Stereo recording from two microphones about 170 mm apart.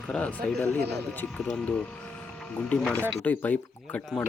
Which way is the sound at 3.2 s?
10° left (ahead or behind).